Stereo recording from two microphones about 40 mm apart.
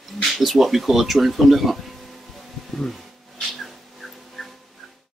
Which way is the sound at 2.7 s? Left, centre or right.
Centre.